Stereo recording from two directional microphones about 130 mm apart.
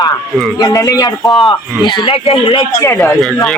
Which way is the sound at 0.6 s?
25° left (ahead or behind).